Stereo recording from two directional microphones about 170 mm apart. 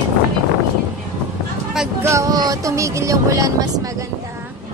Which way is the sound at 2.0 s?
15° right (ahead or behind).